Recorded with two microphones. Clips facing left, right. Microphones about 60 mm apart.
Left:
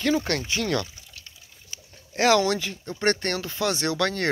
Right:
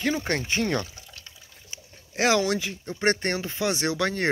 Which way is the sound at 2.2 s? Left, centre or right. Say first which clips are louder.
Left 2 dB; centre.